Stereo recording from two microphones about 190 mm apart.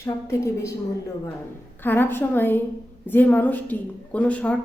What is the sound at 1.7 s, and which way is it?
A woman's voice, 10° left (ahead or behind).